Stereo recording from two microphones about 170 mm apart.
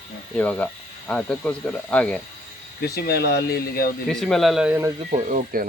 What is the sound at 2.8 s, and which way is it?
Speech, 70° left (ahead or behind).